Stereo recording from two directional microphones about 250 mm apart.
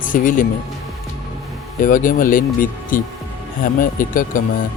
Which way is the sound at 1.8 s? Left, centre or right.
Left.